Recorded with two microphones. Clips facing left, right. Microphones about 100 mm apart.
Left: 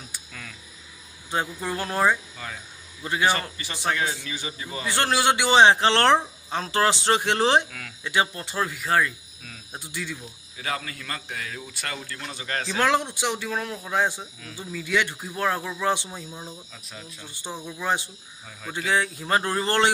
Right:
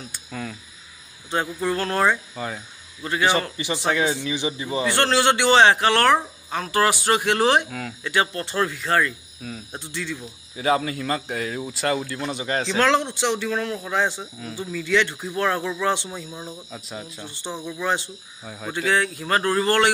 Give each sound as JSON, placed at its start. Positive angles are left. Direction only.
{"t": 0.3, "sound": "speech", "side_deg": -35}
{"t": 1.3, "sound": "speech", "side_deg": 15}
{"t": 2.3, "sound": "speech", "side_deg": -30}
{"t": 3.0, "sound": "speech", "side_deg": 15}
{"t": 3.5, "sound": "a man's voice", "side_deg": -20}
{"t": 4.9, "sound": "speech", "side_deg": 15}
{"t": 10.5, "sound": "speech", "side_deg": -25}
{"t": 12.7, "sound": "speech", "side_deg": 15}
{"t": 14.1, "sound": "speech", "side_deg": -20}
{"t": 14.7, "sound": "speech", "side_deg": 15}
{"t": 16.3, "sound": "a man's voice", "side_deg": -15}
{"t": 17.6, "sound": "speech", "side_deg": 15}
{"t": 18.4, "sound": "speech", "side_deg": -35}
{"t": 18.9, "sound": "speech", "side_deg": 20}